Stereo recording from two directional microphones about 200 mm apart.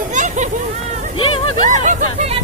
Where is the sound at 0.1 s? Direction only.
35° right (ahead or behind).